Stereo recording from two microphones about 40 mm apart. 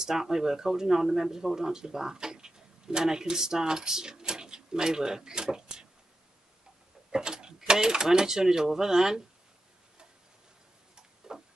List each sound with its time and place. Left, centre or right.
0.0 s speech: centre
7.1 s speech: centre
11.0 s tick-tock: centre